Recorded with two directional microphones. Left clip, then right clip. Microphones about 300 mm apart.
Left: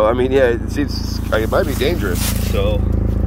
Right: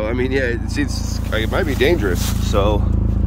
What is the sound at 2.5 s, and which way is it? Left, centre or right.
Speech, centre.